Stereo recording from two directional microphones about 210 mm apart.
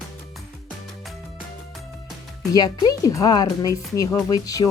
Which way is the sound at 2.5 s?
20° left (ahead or behind).